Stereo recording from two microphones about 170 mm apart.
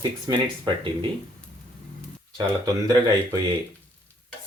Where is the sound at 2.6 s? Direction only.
20° right (ahead or behind).